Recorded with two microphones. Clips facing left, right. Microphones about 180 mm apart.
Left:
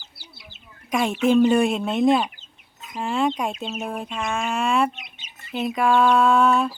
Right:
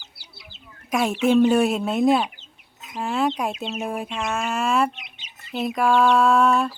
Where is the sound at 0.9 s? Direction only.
5° right (ahead or behind).